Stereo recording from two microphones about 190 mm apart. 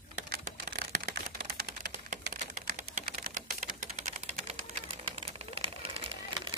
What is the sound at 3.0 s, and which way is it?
Typewriter, 45° right (ahead or behind).